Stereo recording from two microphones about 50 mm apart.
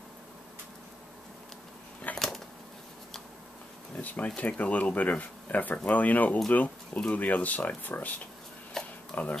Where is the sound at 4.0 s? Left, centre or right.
Left.